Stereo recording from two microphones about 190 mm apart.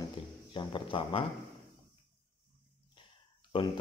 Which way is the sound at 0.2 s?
30° left (ahead or behind).